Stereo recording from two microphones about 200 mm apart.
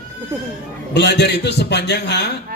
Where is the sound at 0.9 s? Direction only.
60° left (ahead or behind).